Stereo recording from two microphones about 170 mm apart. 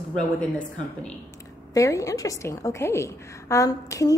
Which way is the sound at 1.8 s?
20° left (ahead or behind).